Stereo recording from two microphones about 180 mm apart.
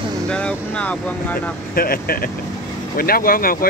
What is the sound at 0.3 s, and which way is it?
Speech, 5° left (ahead or behind).